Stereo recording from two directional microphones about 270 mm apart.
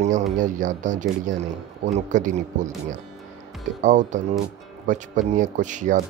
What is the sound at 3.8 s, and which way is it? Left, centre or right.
Speech, right.